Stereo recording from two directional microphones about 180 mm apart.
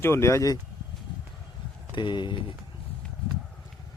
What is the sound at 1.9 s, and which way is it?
Speech, 25° left (ahead or behind).